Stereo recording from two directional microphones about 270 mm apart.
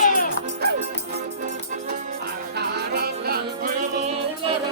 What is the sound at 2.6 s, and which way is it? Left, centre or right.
Music, right.